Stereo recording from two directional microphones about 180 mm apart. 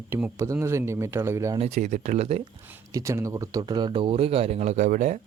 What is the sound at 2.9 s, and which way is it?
Speech, 15° right (ahead or behind).